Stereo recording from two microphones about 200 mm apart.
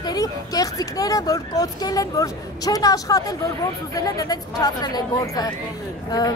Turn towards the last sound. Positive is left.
turn(degrees=20)  # may be behind; listen again after turning